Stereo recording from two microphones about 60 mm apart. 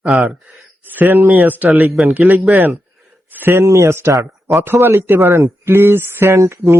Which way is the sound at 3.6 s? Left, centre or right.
Right.